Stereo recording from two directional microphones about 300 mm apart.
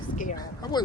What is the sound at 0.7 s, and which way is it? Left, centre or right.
Speech, centre.